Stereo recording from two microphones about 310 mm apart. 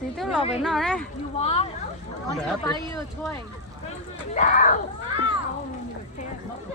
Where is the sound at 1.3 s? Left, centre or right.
Centre.